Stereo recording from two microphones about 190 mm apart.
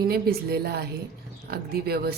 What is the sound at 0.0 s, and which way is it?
A woman's voice, 55° right (ahead or behind).